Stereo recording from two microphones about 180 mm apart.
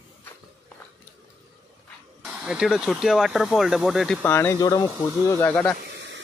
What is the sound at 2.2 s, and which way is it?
Speech, 5° right (ahead or behind).